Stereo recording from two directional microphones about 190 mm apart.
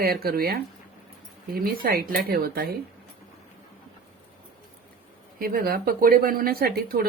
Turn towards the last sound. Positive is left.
turn(degrees=-50)  # may be behind; listen again after turning